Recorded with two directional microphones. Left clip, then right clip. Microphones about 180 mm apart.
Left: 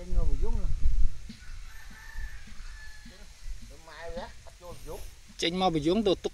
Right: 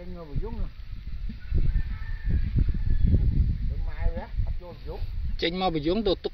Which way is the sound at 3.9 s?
25° right (ahead or behind).